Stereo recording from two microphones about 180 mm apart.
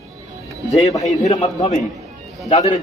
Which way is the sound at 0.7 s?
35° left (ahead or behind).